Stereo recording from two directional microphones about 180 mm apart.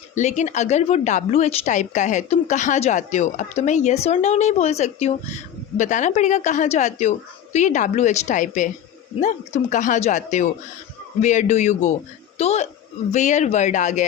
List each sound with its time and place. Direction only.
0.1 s a woman's voice: 40° left (ahead or behind)